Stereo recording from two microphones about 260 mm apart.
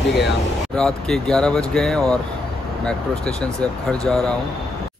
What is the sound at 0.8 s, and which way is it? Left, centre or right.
Speech, centre.